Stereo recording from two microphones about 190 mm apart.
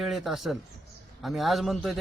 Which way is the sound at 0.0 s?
Centre (ahead or behind).